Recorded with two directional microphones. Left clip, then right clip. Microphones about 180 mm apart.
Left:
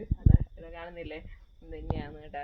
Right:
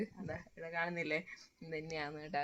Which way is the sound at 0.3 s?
55° right (ahead or behind).